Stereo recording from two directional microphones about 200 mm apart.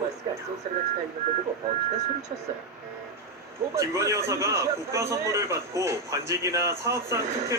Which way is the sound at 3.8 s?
15° right (ahead or behind).